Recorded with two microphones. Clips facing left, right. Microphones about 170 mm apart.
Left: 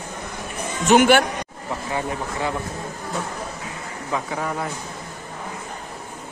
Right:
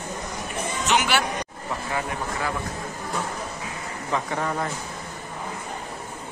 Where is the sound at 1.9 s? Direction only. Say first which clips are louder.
Left 3 dB; 25° left (ahead or behind).